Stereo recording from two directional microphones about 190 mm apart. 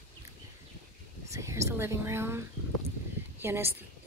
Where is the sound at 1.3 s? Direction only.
15° right (ahead or behind).